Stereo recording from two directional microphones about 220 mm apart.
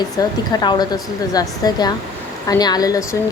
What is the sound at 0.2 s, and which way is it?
Speech, 20° left (ahead or behind).